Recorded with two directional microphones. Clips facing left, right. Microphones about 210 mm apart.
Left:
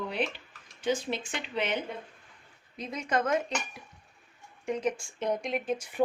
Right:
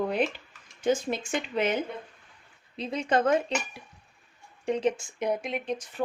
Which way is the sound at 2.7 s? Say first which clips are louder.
Right 4 dB; 30° right (ahead or behind).